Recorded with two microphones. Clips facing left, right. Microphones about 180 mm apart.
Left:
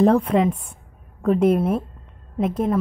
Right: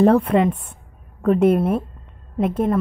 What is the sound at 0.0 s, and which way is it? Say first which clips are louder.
A woman's voice: right 2 dB; 5° right (ahead or behind).